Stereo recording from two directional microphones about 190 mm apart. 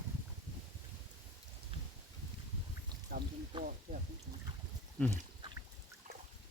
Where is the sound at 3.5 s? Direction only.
25° right (ahead or behind).